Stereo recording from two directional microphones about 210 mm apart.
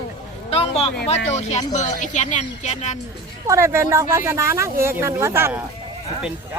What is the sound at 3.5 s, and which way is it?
Speech, 15° right (ahead or behind).